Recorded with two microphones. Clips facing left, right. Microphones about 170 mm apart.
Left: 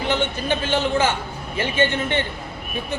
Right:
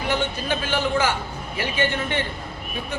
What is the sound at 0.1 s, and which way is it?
A man's voice, 25° left (ahead or behind).